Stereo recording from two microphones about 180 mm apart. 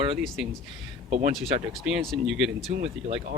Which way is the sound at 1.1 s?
40° right (ahead or behind).